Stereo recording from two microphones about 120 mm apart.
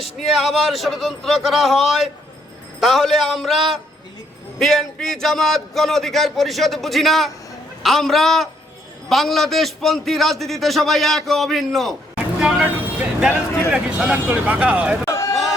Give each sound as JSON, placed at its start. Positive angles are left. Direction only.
{"t": 0.0, "sound": "a man's voice", "side_deg": 0}
{"t": 12.4, "sound": "vehicle", "side_deg": -5}
{"t": 13.7, "sound": "speech", "side_deg": -5}
{"t": 15.0, "sound": "a sound", "side_deg": 25}